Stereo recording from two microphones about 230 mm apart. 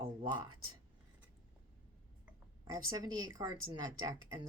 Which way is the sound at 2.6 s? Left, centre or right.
Centre.